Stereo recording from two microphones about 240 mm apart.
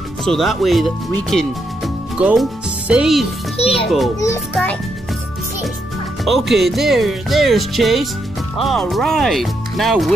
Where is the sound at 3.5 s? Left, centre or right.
Left.